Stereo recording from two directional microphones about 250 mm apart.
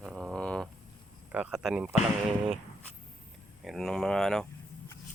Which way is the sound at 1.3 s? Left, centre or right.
Centre.